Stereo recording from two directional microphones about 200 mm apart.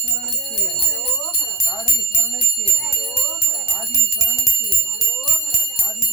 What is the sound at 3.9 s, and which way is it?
Bell, 15° left (ahead or behind).